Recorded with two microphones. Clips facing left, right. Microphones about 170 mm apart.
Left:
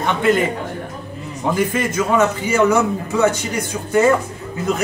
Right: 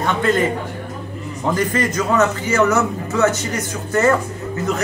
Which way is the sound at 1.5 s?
10° left (ahead or behind).